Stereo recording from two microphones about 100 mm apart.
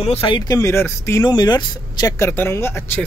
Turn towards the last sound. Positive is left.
turn(degrees=20)  # may be behind; listen again after turning